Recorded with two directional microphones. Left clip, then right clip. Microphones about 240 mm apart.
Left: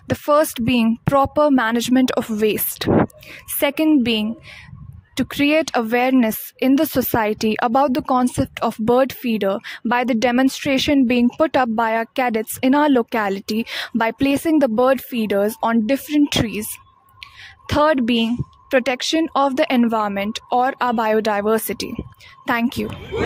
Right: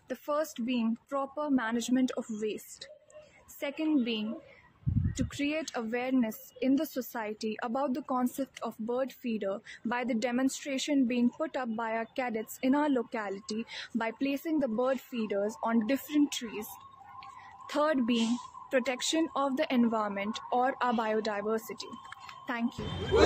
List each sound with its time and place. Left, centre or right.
0.1 s speech: left
17.6 s speech: left